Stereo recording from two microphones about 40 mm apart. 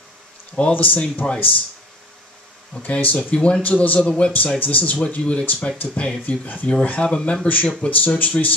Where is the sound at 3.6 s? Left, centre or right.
Left.